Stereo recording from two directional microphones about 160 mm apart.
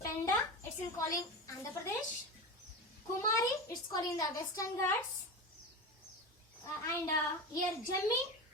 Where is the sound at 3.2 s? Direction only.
25° left (ahead or behind).